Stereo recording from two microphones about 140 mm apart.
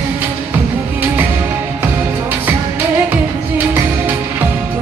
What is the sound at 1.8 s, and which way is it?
Music, 15° right (ahead or behind).